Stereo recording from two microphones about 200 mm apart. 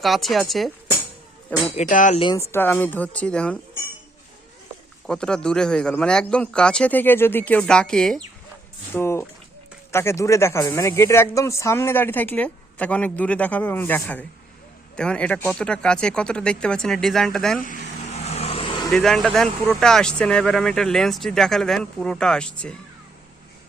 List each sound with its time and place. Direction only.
0.0 s speech: centre (ahead or behind)
1.7 s speech: 40° left (ahead or behind)
2.2 s speech: 15° left (ahead or behind)
5.0 s speech: 5° left (ahead or behind)
17.7 s vehicle: 35° left (ahead or behind)
18.9 s speech: centre (ahead or behind)